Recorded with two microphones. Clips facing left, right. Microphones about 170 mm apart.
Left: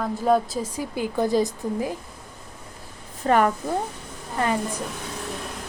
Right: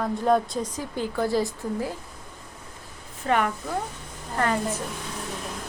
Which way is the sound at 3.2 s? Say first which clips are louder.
Left 5 dB; 40° left (ahead or behind).